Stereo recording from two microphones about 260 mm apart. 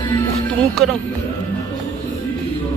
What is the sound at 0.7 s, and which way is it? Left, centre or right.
Speech, centre.